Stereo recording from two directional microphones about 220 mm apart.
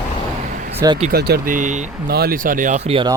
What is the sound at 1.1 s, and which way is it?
Speech, 45° right (ahead or behind).